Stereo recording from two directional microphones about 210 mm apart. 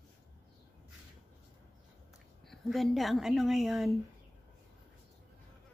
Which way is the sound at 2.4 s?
Centre (ahead or behind).